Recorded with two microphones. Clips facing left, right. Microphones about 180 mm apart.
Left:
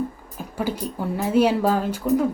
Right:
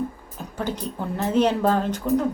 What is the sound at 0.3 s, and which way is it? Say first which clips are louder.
A woman's voice: left 2 dB; 10° left (ahead or behind).